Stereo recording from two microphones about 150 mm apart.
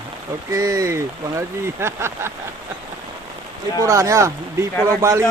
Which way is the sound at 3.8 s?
20° right (ahead or behind).